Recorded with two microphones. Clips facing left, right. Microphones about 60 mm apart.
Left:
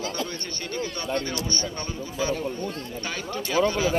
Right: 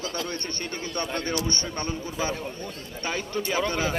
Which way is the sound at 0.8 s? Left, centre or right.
Right.